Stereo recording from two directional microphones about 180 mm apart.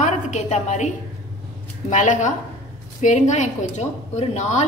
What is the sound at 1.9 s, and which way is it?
A woman's voice, 45° left (ahead or behind).